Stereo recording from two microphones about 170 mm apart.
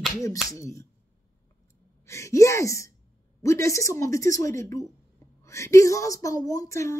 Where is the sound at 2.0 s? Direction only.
15° left (ahead or behind).